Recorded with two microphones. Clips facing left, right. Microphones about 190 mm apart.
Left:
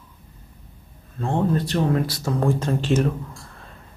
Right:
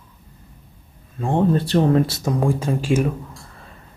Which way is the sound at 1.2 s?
10° right (ahead or behind).